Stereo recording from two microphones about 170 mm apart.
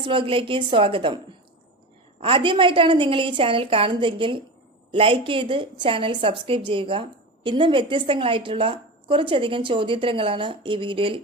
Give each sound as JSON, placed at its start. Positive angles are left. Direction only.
{"t": 0.0, "sound": "a woman's voice", "side_deg": -30}
{"t": 2.2, "sound": "a woman's voice", "side_deg": -30}